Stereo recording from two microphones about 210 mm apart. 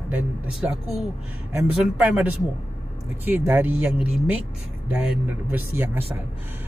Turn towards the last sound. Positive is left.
turn(degrees=-10)  # may be behind; listen again after turning